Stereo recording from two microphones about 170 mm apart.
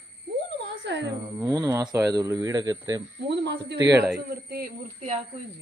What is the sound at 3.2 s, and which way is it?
Speech, 85° right.